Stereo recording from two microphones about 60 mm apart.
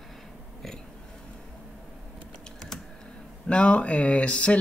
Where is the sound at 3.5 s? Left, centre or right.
Centre.